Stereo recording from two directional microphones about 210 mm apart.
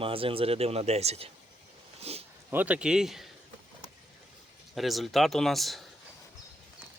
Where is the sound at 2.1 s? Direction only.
30° right (ahead or behind).